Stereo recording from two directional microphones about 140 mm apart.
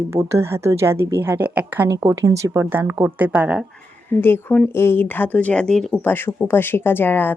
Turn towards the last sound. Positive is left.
turn(degrees=15)  # may be behind; listen again after turning